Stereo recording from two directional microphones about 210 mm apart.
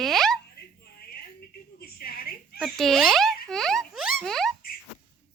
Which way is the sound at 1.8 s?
45° left (ahead or behind).